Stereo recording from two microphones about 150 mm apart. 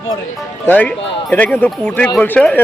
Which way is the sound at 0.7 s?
10° left (ahead or behind).